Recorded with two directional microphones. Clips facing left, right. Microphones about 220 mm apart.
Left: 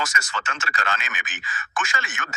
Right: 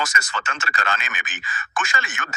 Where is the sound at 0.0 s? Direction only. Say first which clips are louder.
Right 2 dB; 50° right (ahead or behind).